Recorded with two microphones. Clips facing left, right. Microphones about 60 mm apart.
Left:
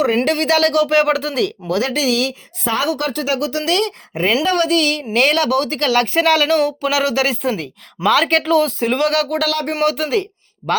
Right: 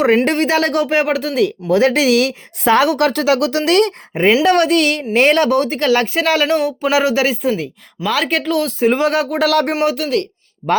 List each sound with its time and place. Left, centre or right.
0.3 s speech: right
1.7 s speech: right
3.7 s a woman's voice: right
4.1 s speech: right
4.4 s a woman's voice: right
5.1 s a woman's voice: right
5.6 s speech: centre
7.5 s speech: centre
8.9 s speech: centre
9.4 s a woman's voice: right
9.7 s speech: centre
10.0 s speech: centre